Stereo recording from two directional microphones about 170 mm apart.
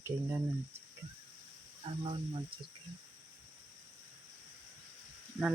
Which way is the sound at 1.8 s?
30° right (ahead or behind).